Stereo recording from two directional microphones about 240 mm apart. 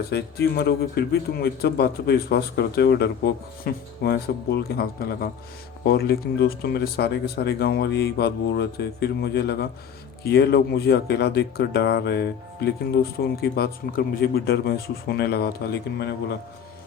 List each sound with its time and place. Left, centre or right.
0.1 s speech: left